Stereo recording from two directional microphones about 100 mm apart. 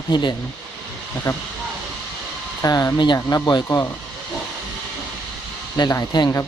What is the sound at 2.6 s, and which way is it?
Speech, 40° left (ahead or behind).